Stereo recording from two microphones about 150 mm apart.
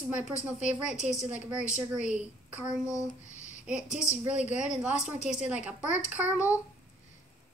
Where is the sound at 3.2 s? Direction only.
55° left (ahead or behind).